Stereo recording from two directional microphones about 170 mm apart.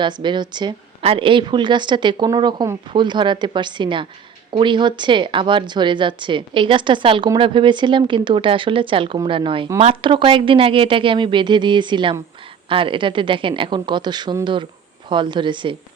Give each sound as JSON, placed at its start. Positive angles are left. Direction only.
{"t": 0.0, "sound": "a woman's voice", "side_deg": -25}